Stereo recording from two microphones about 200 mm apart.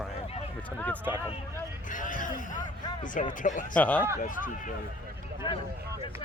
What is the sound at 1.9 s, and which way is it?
Speech, 40° left (ahead or behind).